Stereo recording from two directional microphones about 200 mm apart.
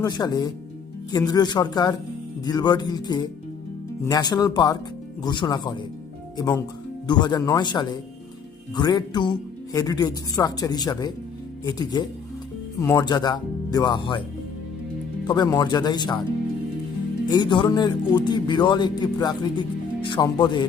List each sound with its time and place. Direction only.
0.0 s speech: 20° left (ahead or behind)
15.3 s speech: 20° left (ahead or behind)
17.2 s speech: 20° left (ahead or behind)